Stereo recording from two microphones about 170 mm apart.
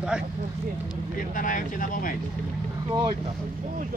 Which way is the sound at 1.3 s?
50° left (ahead or behind).